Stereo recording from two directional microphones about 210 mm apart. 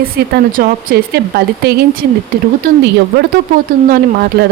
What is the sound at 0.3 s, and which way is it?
Speech, 45° right (ahead or behind).